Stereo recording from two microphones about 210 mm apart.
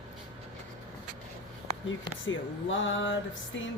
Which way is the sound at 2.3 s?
65° left (ahead or behind).